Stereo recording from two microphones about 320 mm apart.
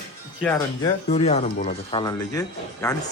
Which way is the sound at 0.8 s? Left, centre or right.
Centre.